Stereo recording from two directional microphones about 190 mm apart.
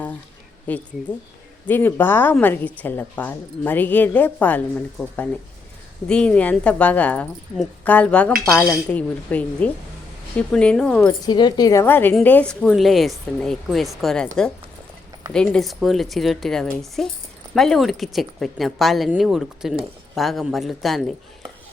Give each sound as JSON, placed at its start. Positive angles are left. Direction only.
{"t": 0.7, "sound": "a woman's voice", "side_deg": 10}
{"t": 8.4, "sound": "a woman's voice", "side_deg": 15}
{"t": 11.3, "sound": "a woman's voice", "side_deg": 20}